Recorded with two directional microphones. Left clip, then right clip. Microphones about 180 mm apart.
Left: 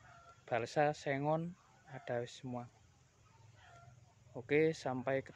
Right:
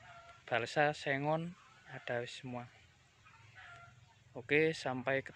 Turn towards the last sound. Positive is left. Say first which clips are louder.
# right 2 dB
turn(degrees=5)  # may be behind; listen again after turning